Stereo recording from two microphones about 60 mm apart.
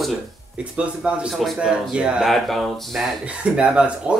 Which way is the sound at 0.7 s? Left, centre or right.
Centre.